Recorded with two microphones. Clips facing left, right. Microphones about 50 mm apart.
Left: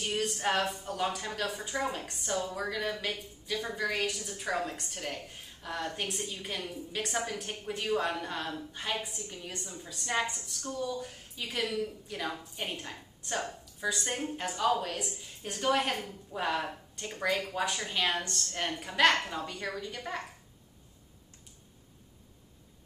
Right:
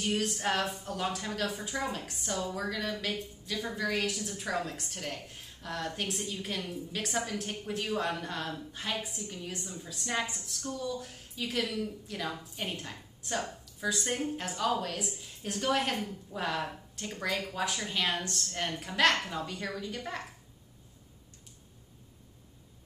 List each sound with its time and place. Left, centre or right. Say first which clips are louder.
0.0 s a woman's voice: even; centre